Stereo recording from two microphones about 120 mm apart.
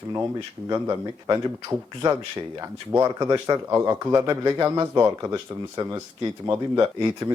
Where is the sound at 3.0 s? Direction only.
30° right (ahead or behind).